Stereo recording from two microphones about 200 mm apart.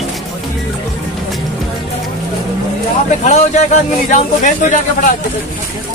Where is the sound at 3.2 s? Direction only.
35° left (ahead or behind).